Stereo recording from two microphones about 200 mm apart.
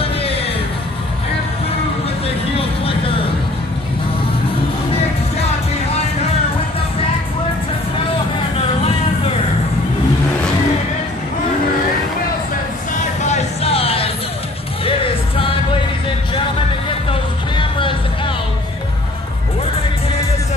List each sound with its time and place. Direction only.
0.0 s music: 30° left (ahead or behind)
2.2 s vehicle: 30° left (ahead or behind)
13.2 s music: 35° left (ahead or behind)
17.1 s music: 25° left (ahead or behind)